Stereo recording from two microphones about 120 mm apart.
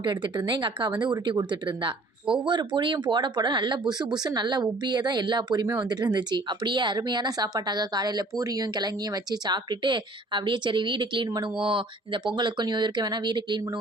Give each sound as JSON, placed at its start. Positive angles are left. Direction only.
{"t": 0.0, "sound": "speech", "side_deg": -40}